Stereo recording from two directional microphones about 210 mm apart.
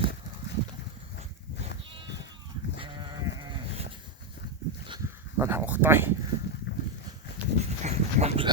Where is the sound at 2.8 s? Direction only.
20° right (ahead or behind).